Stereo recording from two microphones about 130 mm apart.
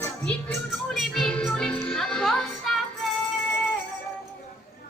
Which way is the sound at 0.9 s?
Centre (ahead or behind).